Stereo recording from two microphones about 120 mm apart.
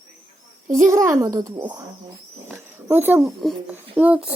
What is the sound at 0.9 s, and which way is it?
Speech, 25° right (ahead or behind).